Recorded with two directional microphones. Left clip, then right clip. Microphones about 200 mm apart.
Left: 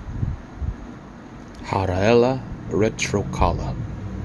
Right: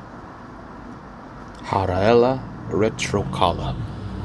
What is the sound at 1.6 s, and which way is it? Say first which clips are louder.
Speech: right 2 dB; 10° left (ahead or behind).